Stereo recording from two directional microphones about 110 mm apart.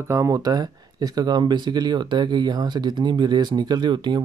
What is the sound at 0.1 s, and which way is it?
Speech, 30° right (ahead or behind).